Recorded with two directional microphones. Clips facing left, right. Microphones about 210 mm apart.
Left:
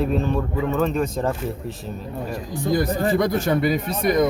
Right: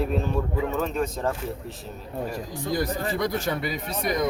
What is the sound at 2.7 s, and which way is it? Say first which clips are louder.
Speech: left 7 dB; 50° left (ahead or behind).